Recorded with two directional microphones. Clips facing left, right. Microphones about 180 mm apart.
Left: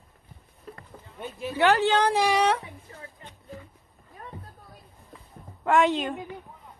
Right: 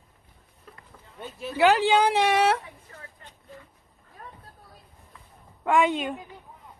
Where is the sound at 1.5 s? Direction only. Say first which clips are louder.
Right 2 dB; 10° right (ahead or behind).